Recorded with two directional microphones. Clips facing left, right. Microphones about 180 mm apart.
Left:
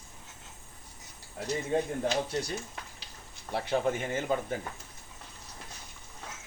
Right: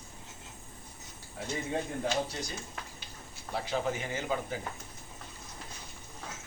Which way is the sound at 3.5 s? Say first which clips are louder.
Left 3 dB; 55° left (ahead or behind).